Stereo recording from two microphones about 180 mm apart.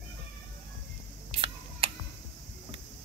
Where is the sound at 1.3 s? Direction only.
30° right (ahead or behind).